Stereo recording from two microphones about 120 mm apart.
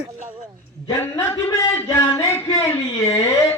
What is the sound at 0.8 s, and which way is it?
A man's voice, 25° left (ahead or behind).